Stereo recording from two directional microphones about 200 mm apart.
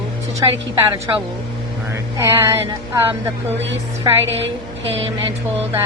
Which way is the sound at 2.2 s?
15° right (ahead or behind).